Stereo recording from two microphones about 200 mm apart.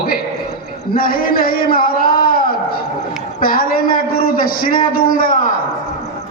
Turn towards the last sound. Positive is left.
turn(degrees=45)  # may be behind; listen again after turning